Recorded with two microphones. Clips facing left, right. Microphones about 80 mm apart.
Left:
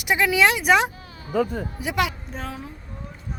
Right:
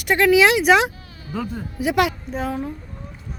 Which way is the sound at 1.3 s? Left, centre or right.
Left.